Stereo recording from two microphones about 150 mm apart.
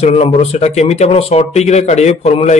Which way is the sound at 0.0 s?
45° left (ahead or behind).